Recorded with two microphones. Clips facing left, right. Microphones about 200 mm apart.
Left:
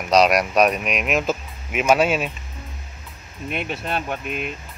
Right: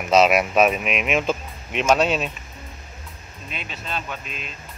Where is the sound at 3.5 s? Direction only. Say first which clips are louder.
Left 7 dB; 60° left (ahead or behind).